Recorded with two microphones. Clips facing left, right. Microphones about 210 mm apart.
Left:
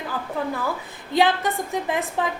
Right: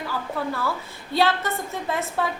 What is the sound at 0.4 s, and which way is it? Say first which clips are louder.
A woman's voice: left 2 dB; 15° left (ahead or behind).